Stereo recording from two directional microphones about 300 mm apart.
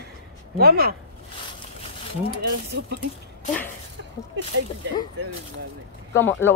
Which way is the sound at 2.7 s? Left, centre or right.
Right.